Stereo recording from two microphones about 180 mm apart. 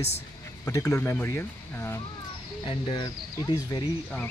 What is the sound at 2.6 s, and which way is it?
Speech, 25° left (ahead or behind).